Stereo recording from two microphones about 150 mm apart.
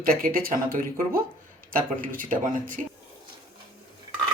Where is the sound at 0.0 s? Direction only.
70° right (ahead or behind).